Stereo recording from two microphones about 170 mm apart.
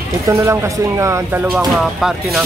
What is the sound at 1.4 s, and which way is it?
Speech, 5° right (ahead or behind).